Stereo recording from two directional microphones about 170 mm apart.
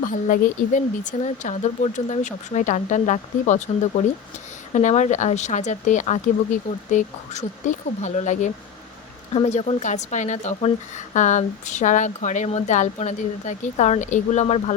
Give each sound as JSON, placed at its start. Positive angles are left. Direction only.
{"t": 0.0, "sound": "speech", "side_deg": 50}